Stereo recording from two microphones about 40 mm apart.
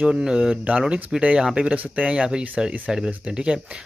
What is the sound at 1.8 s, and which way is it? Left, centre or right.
Speech, right.